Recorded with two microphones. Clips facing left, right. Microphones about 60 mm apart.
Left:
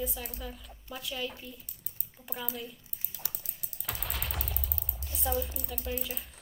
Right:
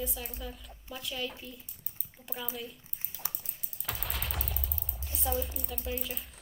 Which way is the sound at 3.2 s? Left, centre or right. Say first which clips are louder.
Right 3 dB; right.